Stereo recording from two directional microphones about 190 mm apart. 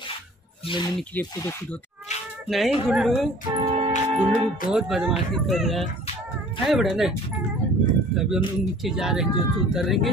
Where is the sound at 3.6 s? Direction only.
35° right (ahead or behind).